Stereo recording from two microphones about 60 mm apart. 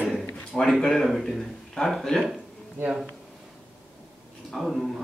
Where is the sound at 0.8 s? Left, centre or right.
Centre.